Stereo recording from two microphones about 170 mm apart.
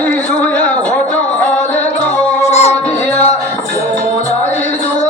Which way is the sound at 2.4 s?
40° left (ahead or behind).